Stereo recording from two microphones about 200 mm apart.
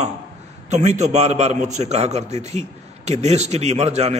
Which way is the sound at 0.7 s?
35° right (ahead or behind).